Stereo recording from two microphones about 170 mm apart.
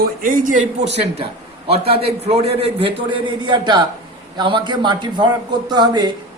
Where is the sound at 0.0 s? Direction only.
55° right (ahead or behind).